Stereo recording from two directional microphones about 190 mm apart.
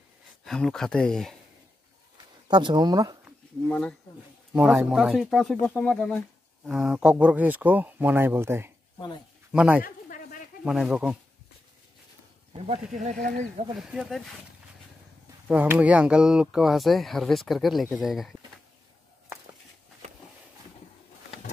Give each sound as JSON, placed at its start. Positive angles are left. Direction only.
{"t": 0.5, "sound": "speech", "side_deg": 0}
{"t": 2.4, "sound": "speech", "side_deg": -25}
{"t": 3.6, "sound": "speech", "side_deg": 5}
{"t": 8.9, "sound": "speech", "side_deg": 25}
{"t": 9.5, "sound": "speech", "side_deg": -5}
{"t": 9.8, "sound": "a sound", "side_deg": 50}
{"t": 10.6, "sound": "speech", "side_deg": -5}
{"t": 12.5, "sound": "speech", "side_deg": -35}
{"t": 13.7, "sound": "speech", "side_deg": 0}
{"t": 15.4, "sound": "speech", "side_deg": -10}